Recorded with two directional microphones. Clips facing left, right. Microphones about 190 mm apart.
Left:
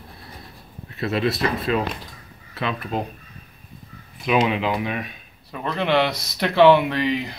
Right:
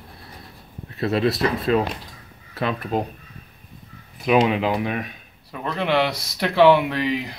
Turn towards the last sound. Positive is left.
turn(degrees=-5)  # may be behind; listen again after turning